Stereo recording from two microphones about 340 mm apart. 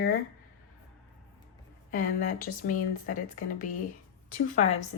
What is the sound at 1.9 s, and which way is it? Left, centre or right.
Speech, left.